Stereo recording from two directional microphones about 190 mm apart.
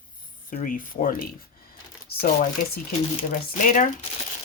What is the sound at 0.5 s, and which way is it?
Speech, 45° left (ahead or behind).